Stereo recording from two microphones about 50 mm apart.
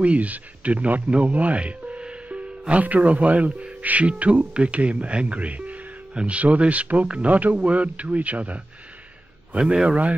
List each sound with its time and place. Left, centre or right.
0.0 s speech: right
9.6 s a man's voice: centre